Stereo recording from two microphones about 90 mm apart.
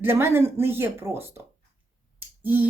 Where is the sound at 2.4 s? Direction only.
20° right (ahead or behind).